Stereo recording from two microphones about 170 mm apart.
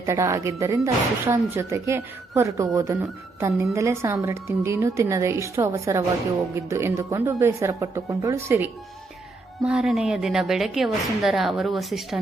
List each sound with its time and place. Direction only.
0.0 s a woman's voice: 20° right (ahead or behind)
9.6 s a woman's voice: 5° right (ahead or behind)